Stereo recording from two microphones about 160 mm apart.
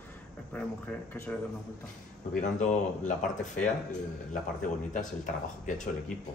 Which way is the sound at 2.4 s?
50° left (ahead or behind).